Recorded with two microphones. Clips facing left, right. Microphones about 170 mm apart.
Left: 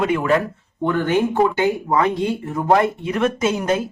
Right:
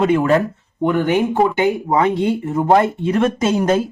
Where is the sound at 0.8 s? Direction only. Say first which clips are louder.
Right 2 dB; 15° right (ahead or behind).